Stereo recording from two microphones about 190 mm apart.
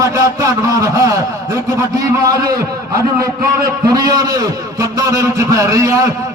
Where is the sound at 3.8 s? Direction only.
20° right (ahead or behind).